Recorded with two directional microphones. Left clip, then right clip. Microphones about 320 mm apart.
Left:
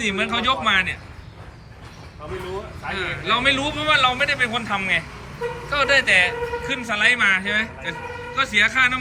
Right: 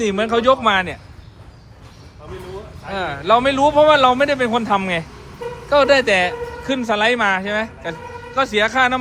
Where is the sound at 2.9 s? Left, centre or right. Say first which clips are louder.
Right 6 dB; centre.